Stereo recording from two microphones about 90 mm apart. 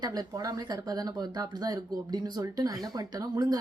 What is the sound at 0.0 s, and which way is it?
Speech, 45° right (ahead or behind).